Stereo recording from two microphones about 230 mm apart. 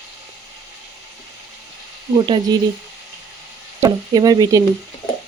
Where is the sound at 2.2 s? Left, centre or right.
Centre.